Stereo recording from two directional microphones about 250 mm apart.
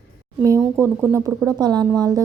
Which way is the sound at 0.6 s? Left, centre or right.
Centre.